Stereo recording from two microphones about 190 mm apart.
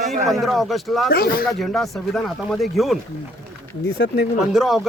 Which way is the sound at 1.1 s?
55° left (ahead or behind).